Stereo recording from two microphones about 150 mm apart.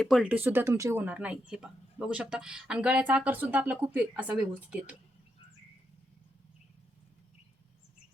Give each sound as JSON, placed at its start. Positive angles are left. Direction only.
{"t": 0.0, "sound": "speech", "side_deg": -5}